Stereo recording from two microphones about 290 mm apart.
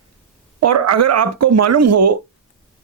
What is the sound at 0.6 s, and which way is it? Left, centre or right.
Speech, right.